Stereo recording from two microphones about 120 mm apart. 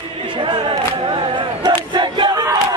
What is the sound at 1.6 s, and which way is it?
Battle cry, 40° right (ahead or behind).